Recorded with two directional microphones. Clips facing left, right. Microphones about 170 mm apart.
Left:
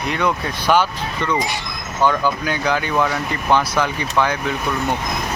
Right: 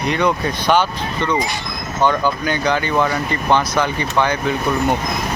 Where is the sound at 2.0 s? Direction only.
5° left (ahead or behind).